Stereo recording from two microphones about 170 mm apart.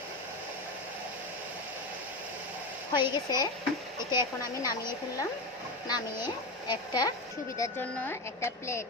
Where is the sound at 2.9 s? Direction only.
25° left (ahead or behind).